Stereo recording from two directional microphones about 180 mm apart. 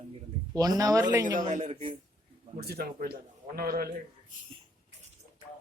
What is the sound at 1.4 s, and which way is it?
Speech, 45° right (ahead or behind).